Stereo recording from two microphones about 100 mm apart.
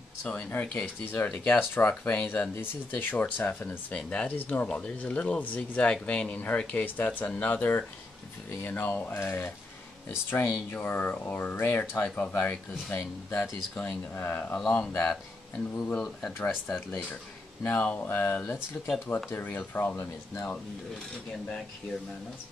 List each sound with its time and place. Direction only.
0.2 s speech: 15° left (ahead or behind)